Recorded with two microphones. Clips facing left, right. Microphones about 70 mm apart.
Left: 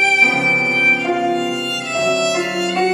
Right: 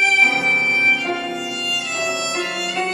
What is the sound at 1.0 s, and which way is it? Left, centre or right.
Violin, centre.